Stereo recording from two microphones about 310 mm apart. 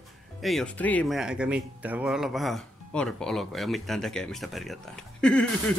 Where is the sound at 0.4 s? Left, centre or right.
Centre.